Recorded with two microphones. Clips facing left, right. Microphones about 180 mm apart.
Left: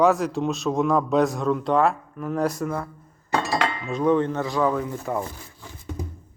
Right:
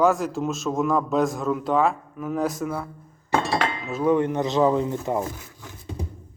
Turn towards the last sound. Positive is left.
turn(degrees=-25)  # may be behind; listen again after turning